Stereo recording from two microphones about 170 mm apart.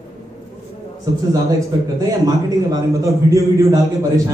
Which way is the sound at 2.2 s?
20° right (ahead or behind).